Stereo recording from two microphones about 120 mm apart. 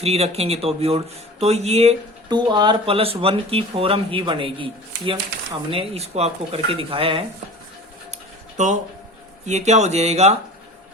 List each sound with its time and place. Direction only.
0.0 s speech: 60° right (ahead or behind)
2.3 s speech: 40° right (ahead or behind)
2.9 s a man's voice: 50° right (ahead or behind)
8.5 s speech: 85° right
9.5 s speech: 70° right (ahead or behind)